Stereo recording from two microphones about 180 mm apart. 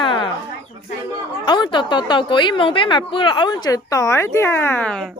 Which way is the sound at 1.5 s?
25° left (ahead or behind).